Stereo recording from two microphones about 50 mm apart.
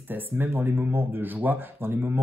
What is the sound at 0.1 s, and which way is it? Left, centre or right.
Speech, right.